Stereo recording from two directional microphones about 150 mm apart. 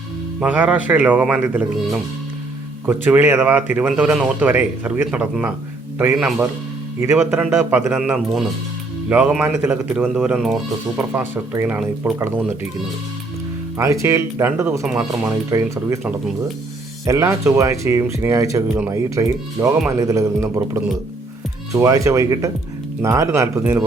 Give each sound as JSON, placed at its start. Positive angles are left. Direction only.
{"t": 0.3, "sound": "speech", "side_deg": -10}
{"t": 7.9, "sound": "speech", "side_deg": -5}
{"t": 10.2, "sound": "speech", "side_deg": -5}
{"t": 11.1, "sound": "speech", "side_deg": -15}
{"t": 13.7, "sound": "speech", "side_deg": -20}
{"t": 17.1, "sound": "speech", "side_deg": -20}